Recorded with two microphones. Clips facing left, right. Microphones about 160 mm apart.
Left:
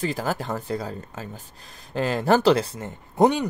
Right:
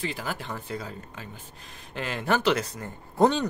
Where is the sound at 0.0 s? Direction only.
40° left (ahead or behind).